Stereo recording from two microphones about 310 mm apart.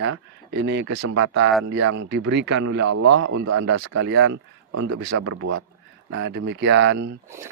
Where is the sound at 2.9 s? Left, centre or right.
Right.